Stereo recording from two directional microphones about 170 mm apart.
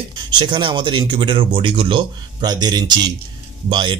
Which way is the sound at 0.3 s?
25° right (ahead or behind).